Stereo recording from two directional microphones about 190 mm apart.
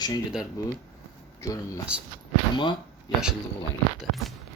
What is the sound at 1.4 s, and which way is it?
Speech, 20° left (ahead or behind).